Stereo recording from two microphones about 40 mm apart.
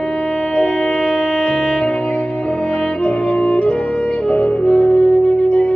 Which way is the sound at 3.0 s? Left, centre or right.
Left.